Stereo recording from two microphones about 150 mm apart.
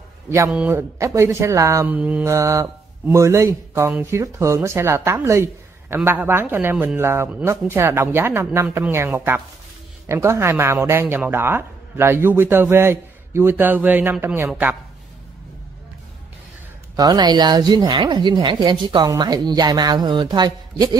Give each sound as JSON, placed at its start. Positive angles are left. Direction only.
{"t": 0.5, "sound": "speech", "side_deg": -10}
{"t": 16.9, "sound": "a woman's voice", "side_deg": -25}